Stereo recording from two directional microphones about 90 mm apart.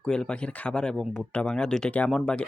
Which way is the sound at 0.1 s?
10° left (ahead or behind).